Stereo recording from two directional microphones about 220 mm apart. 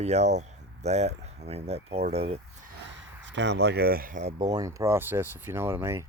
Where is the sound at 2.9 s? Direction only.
55° right (ahead or behind); by 4.3 s 35° right (ahead or behind).